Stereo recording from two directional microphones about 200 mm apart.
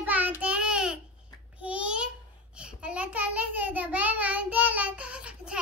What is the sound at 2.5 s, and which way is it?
A child's voice, 5° right (ahead or behind).